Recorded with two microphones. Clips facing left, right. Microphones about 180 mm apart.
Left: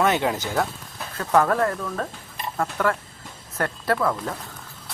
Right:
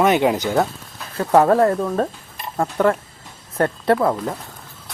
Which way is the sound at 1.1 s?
30° right (ahead or behind).